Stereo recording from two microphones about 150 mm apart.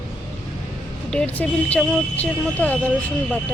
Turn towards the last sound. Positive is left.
turn(degrees=10)  # may be behind; listen again after turning